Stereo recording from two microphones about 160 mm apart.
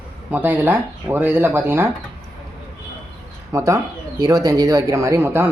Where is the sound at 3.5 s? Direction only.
20° right (ahead or behind).